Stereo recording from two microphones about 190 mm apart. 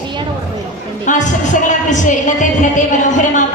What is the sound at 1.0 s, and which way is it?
Speech, 40° left (ahead or behind).